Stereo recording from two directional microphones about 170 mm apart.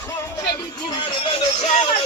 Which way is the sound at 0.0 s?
20° left (ahead or behind).